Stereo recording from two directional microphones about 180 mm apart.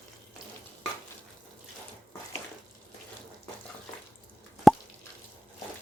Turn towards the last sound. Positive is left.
turn(degrees=0)  # may be behind; listen again after turning